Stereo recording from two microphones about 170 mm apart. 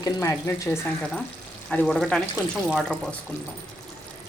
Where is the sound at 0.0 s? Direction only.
15° left (ahead or behind).